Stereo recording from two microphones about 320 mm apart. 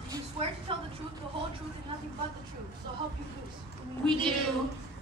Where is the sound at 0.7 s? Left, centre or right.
Centre.